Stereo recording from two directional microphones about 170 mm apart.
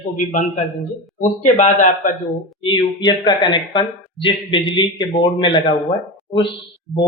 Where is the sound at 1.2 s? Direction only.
45° left (ahead or behind).